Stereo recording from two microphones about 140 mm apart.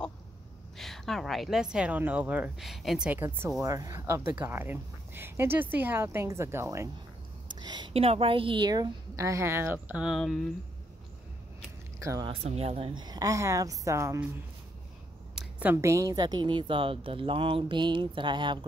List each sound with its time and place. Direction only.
0.7 s a woman's voice: centre (ahead or behind)
2.6 s a woman's voice: centre (ahead or behind)
3.1 s speech: 15° right (ahead or behind)
7.6 s a woman's voice: 30° right (ahead or behind)
7.9 s a woman's voice: 45° right (ahead or behind); by 10.5 s centre (ahead or behind)
12.0 s a woman's voice: 20° right (ahead or behind)
12.3 s speech: 45° right (ahead or behind)
12.9 s a woman's voice: 30° right (ahead or behind)
15.6 s a woman's voice: 20° right (ahead or behind)